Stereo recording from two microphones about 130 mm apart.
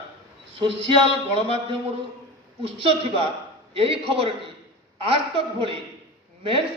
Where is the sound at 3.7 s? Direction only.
45° right (ahead or behind).